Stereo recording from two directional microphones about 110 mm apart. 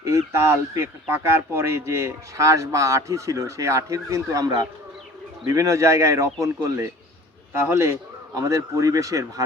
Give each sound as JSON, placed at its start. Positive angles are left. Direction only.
{"t": 0.0, "sound": "a man's voice", "side_deg": -25}